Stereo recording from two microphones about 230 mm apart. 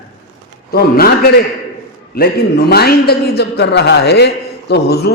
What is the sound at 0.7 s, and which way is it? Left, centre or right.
Speech, left.